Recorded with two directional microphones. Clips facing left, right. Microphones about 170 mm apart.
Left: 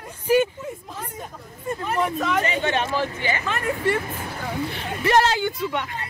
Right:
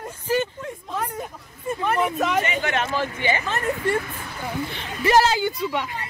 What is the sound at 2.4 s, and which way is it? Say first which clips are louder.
Speech: left 2 dB; 30° left (ahead or behind).